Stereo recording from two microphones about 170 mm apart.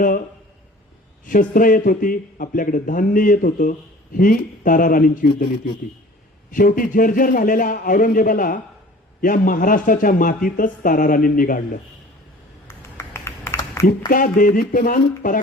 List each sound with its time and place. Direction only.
1.3 s speech: 55° left (ahead or behind)
6.5 s speech: 55° left (ahead or behind)
12.6 s a sound: 15° left (ahead or behind)
14.1 s speech: 55° left (ahead or behind)